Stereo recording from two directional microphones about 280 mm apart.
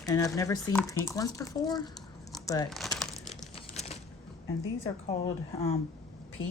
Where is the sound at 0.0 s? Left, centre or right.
Centre.